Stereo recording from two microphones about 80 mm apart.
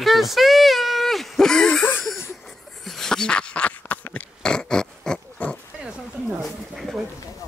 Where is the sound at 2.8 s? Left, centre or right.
Centre.